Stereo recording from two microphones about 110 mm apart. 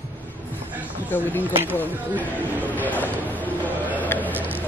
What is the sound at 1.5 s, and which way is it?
Speech, 20° right (ahead or behind).